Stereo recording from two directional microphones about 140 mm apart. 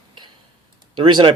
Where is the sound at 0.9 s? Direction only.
35° right (ahead or behind).